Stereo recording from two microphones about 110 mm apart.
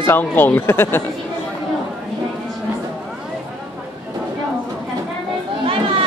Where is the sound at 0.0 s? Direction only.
20° left (ahead or behind).